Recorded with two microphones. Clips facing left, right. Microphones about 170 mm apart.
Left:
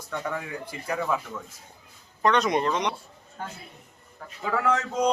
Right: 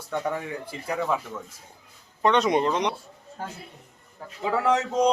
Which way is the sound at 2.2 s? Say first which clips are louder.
Right 2 dB; 25° right (ahead or behind).